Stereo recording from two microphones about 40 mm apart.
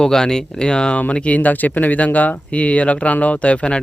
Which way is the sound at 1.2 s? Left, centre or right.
Left.